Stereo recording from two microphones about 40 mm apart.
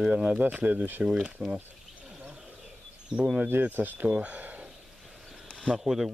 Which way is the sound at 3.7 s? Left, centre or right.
Right.